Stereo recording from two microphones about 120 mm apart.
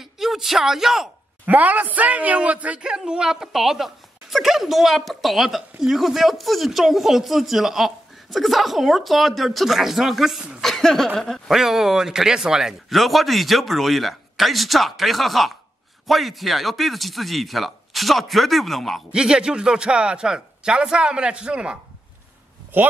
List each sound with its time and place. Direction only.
0.0 s speech: centre (ahead or behind)
1.4 s speech: 15° right (ahead or behind)
10.6 s a sound: 5° left (ahead or behind)
11.1 s speech: centre (ahead or behind); by 22.9 s 15° right (ahead or behind)